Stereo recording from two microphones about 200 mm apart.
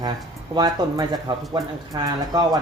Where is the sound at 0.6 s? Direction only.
20° right (ahead or behind).